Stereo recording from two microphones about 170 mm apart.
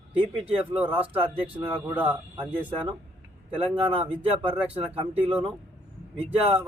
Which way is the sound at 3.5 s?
35° right (ahead or behind).